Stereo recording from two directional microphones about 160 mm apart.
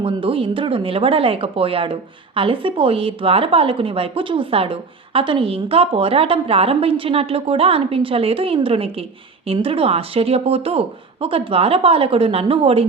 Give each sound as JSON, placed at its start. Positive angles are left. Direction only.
{"t": 0.0, "sound": "speech", "side_deg": -35}